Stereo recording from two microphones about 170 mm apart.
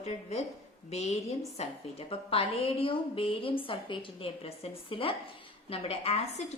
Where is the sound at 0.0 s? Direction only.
40° left (ahead or behind).